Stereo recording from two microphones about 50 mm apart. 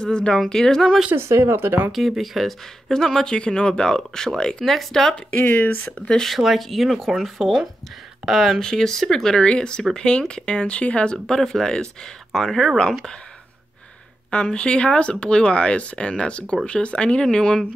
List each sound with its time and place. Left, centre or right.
0.0 s speech: centre
1.1 s speech: right
1.9 s speech: centre
2.9 s speech: centre
5.1 s speech: left
5.9 s speech: centre
6.2 s speech: centre
14.3 s speech: centre